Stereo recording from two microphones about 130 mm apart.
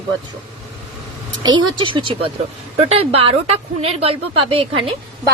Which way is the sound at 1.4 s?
40° right (ahead or behind).